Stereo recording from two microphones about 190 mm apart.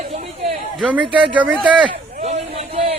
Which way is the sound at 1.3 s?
5° right (ahead or behind).